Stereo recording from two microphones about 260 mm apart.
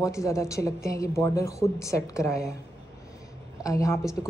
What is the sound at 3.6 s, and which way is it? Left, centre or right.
Speech, centre.